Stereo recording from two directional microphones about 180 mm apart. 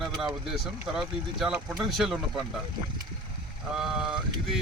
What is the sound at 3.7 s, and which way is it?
Speech, centre (ahead or behind).